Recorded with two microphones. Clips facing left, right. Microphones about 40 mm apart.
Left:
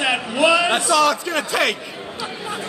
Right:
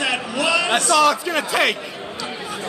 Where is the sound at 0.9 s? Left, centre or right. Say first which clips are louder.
Right 2 dB; centre.